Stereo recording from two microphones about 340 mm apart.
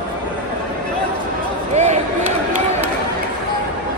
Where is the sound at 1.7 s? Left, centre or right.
Centre.